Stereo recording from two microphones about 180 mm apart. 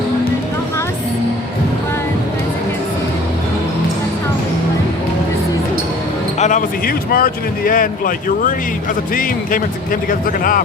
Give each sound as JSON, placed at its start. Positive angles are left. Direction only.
{"t": 6.4, "sound": "speech", "side_deg": 50}